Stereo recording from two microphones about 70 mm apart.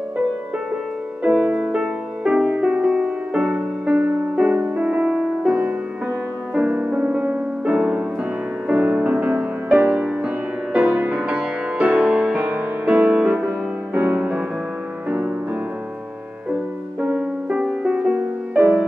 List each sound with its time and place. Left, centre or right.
1.2 s music: centre
3.9 s music: right
4.7 s music: centre
17.0 s music: centre